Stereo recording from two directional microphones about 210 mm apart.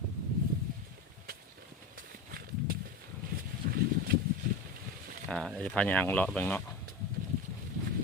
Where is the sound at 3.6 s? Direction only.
45° right (ahead or behind).